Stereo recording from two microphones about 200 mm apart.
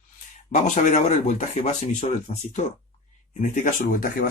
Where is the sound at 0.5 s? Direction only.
35° left (ahead or behind).